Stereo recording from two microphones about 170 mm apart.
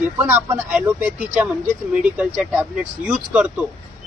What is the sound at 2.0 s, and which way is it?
A man's voice, 10° right (ahead or behind).